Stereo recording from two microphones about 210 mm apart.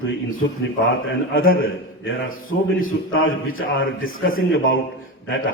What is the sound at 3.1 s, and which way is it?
A man's voice, 75° left (ahead or behind).